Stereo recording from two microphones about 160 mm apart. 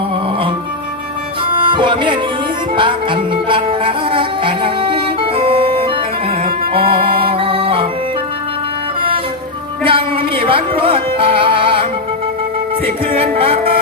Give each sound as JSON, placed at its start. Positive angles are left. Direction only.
{"t": 1.5, "sound": "music", "side_deg": -30}
{"t": 9.0, "sound": "music", "side_deg": -35}